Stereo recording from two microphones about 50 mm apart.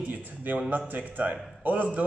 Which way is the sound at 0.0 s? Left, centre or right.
Right.